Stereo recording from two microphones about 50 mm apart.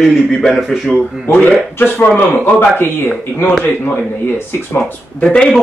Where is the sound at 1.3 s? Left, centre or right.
Left.